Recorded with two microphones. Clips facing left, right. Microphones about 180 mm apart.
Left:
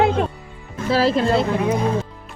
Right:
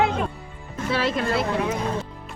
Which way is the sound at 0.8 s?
35° left (ahead or behind).